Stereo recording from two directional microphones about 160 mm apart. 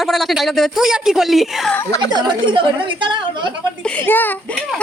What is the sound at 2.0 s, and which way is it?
A woman's voice, 25° right (ahead or behind).